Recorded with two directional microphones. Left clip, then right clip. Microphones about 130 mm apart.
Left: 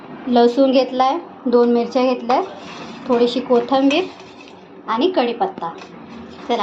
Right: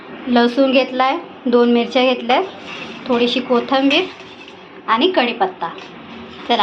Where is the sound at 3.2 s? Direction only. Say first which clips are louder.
Left 1 dB; 20° left (ahead or behind).